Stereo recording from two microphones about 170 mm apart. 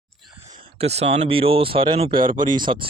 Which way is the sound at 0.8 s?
35° right (ahead or behind).